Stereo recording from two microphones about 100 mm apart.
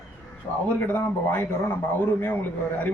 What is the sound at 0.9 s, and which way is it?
Speech, 20° left (ahead or behind).